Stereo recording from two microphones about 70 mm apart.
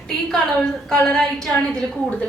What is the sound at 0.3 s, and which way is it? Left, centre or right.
A woman's voice, centre.